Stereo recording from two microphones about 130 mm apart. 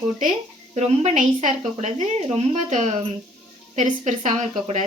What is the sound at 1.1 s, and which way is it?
Speech, 75° right (ahead or behind).